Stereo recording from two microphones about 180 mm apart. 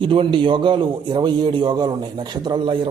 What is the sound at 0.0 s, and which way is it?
A man's voice, 30° right (ahead or behind).